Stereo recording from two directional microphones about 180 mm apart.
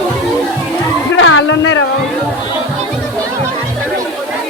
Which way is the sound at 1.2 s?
90° left.